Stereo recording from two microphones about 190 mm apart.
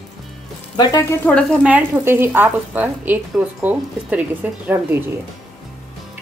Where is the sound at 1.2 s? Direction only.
5° left (ahead or behind).